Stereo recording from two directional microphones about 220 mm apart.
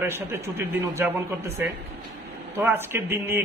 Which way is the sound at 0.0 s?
10° right (ahead or behind).